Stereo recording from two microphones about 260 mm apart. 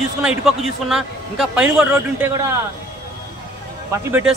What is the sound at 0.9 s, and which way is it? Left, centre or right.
A man's voice, centre.